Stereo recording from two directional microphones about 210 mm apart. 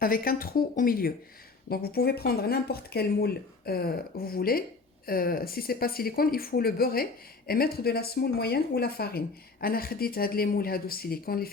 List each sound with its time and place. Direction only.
0.0 s speech: 45° left (ahead or behind)